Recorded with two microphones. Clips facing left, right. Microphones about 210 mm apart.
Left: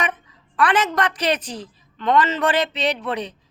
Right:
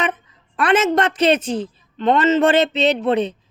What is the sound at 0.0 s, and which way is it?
A woman's voice, 25° right (ahead or behind).